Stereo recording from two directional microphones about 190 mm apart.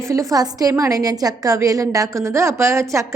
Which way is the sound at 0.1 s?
15° right (ahead or behind).